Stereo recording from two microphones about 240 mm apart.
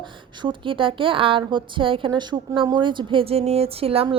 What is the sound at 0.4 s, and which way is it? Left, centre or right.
A woman's voice, right.